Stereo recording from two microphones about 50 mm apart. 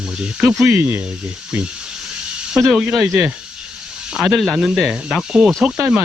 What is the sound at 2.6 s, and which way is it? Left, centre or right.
Speech, centre.